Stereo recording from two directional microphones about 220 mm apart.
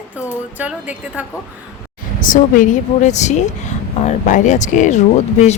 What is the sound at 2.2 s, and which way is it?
Speech, 35° left (ahead or behind).